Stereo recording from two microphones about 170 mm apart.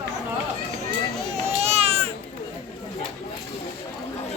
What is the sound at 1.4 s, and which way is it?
Baby cry, 40° right (ahead or behind).